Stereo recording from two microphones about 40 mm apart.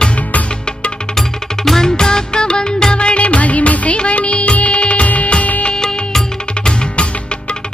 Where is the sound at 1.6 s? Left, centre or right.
Centre; by 5.3 s left.